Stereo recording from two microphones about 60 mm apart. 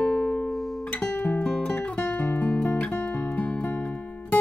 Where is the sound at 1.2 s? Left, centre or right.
Centre.